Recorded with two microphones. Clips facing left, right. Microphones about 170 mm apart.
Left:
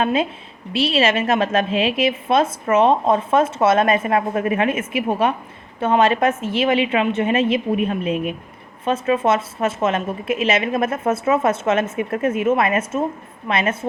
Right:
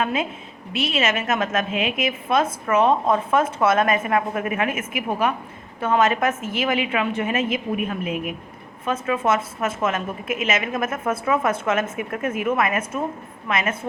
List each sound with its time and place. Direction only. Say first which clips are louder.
0.0 s a woman's voice: left 4 dB; 30° left (ahead or behind)